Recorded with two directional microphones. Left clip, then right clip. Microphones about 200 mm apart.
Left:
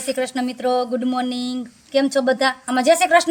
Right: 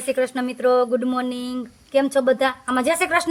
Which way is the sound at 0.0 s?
20° right (ahead or behind).